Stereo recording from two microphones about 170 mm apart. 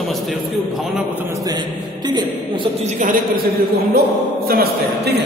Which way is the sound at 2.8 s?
50° right (ahead or behind).